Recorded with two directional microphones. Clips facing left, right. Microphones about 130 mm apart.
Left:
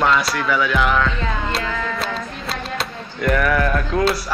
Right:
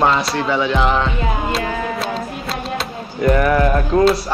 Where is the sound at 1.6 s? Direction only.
30° right (ahead or behind).